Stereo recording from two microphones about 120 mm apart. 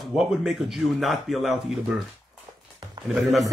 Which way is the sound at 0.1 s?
5° right (ahead or behind).